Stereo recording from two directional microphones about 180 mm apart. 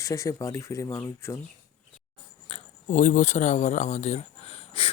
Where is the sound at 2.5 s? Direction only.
45° left (ahead or behind).